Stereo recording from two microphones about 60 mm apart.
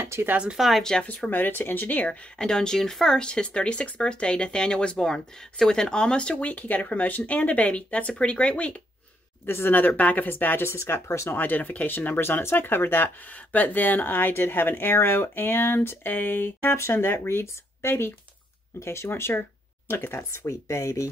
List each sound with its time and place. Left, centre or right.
0.0 s a sound: right
0.6 s speech: centre
1.0 s speech: left
2.3 s speech: centre
9.5 s speech: left
11.3 s speech: left
12.2 s speech: left